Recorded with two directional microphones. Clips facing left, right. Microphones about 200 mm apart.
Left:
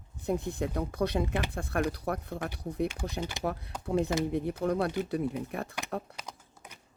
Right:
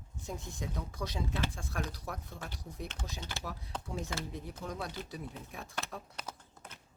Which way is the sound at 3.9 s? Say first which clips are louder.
Left 13 dB; 60° left (ahead or behind).